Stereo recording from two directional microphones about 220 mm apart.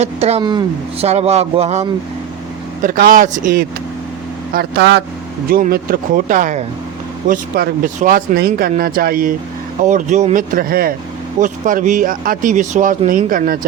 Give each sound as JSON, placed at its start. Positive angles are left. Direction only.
{"t": 0.0, "sound": "speech", "side_deg": -30}
{"t": 2.8, "sound": "speech", "side_deg": -40}
{"t": 4.5, "sound": "speech", "side_deg": -50}
{"t": 5.5, "sound": "speech", "side_deg": -40}